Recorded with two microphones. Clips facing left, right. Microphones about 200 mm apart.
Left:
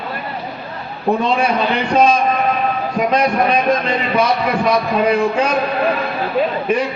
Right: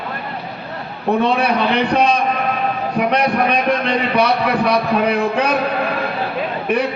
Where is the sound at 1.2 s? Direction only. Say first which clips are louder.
Right 1 dB; 60° right (ahead or behind).